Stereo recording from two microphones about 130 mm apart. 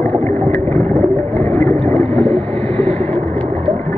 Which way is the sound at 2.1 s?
50° right (ahead or behind).